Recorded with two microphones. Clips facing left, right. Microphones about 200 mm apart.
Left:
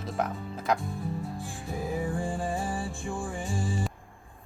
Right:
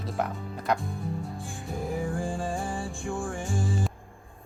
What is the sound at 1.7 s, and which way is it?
Music, centre (ahead or behind).